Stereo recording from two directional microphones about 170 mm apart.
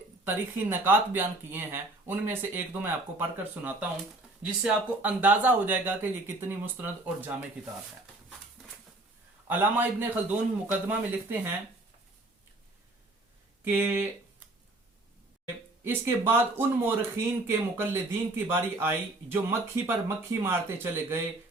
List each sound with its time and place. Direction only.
0.3 s speech: 10° right (ahead or behind)
9.5 s speech: 10° right (ahead or behind)
13.7 s speech: 15° right (ahead or behind)
15.8 s speech: 15° right (ahead or behind)